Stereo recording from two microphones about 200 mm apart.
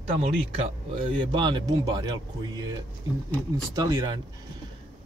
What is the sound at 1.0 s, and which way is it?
Speech, 25° right (ahead or behind).